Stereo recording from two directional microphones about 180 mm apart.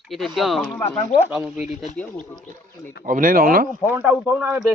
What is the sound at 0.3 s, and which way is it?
Speech, centre (ahead or behind).